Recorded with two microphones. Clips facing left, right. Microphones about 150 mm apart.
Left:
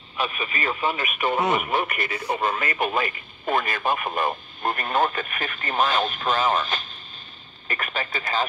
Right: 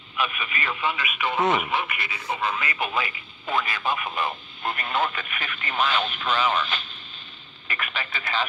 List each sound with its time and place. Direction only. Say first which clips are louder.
0.2 s speech: left 1 dB; 35° left (ahead or behind)